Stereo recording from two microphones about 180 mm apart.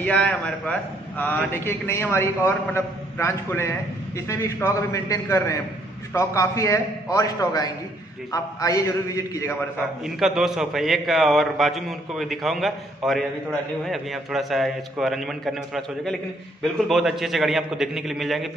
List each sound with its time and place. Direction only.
0.0 s a man's voice: 5° left (ahead or behind)
10.0 s a man's voice: centre (ahead or behind)